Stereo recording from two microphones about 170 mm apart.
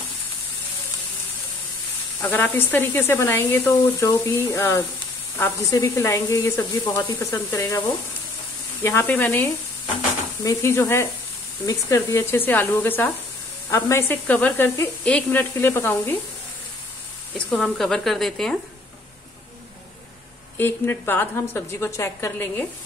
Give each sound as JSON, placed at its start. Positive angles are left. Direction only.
{"t": 2.2, "sound": "speech", "side_deg": 10}
{"t": 8.8, "sound": "speech", "side_deg": 15}
{"t": 17.5, "sound": "a woman's voice", "side_deg": 0}
{"t": 20.5, "sound": "speech", "side_deg": 10}